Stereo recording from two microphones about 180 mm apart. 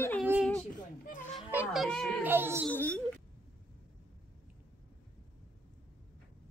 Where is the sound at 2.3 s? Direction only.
10° right (ahead or behind).